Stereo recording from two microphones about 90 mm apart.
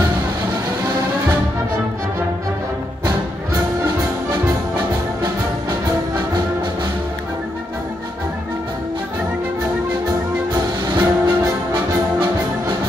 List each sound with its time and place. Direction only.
5.2 s music: 45° right (ahead or behind)
11.0 s music: 25° right (ahead or behind)
11.7 s music: 55° right (ahead or behind)